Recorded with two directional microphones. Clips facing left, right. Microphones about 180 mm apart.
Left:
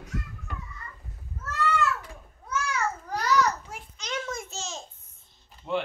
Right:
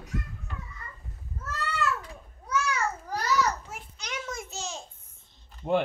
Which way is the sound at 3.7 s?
10° right (ahead or behind).